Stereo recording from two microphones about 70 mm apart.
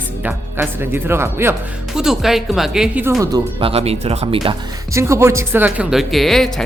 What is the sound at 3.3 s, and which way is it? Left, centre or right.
Speech, right.